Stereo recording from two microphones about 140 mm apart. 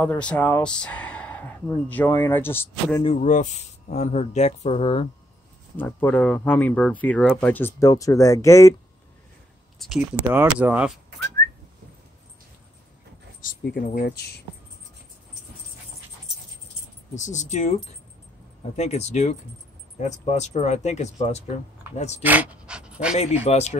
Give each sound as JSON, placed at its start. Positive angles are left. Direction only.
{"t": 0.0, "sound": "speech", "side_deg": 10}
{"t": 3.2, "sound": "speech", "side_deg": 60}
{"t": 5.8, "sound": "speech", "side_deg": 15}
{"t": 9.8, "sound": "speech", "side_deg": 0}
{"t": 10.3, "sound": "speech", "side_deg": -10}
{"t": 13.7, "sound": "speech", "side_deg": 80}
{"t": 17.1, "sound": "speech", "side_deg": 60}
{"t": 18.8, "sound": "speech", "side_deg": 55}
{"t": 22.2, "sound": "dog", "side_deg": -10}
{"t": 23.1, "sound": "speech", "side_deg": 50}